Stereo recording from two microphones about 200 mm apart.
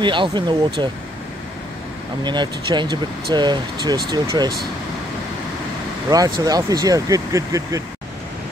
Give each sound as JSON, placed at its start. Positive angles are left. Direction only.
{"t": 0.0, "sound": "speech", "side_deg": -25}
{"t": 2.2, "sound": "speech", "side_deg": -20}
{"t": 6.0, "sound": "speech", "side_deg": -20}